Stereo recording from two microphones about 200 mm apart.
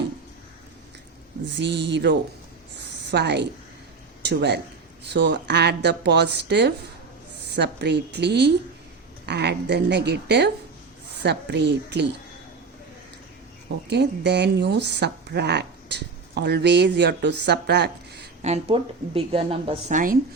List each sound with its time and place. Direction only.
1.5 s speech: 60° right (ahead or behind)
2.7 s a sound: 60° right (ahead or behind)
4.2 s speech: 55° right (ahead or behind)
13.9 s speech: 55° right (ahead or behind)
18.4 s speech: 30° right (ahead or behind)